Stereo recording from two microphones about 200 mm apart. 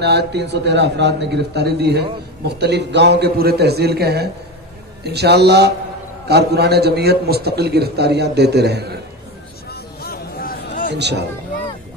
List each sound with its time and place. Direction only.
0.0 s a man's voice: 55° right (ahead or behind)
9.7 s a sound: 50° left (ahead or behind)
10.9 s a man's voice: 55° right (ahead or behind)